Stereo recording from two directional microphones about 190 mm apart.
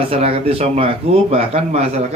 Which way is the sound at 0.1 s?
30° right (ahead or behind).